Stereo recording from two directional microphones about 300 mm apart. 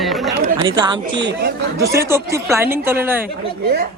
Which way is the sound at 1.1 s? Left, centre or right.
Right.